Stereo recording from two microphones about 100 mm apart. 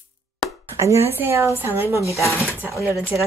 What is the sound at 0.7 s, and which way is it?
Speech, 30° right (ahead or behind).